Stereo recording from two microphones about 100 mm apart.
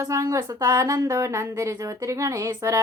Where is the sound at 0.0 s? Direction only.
30° right (ahead or behind).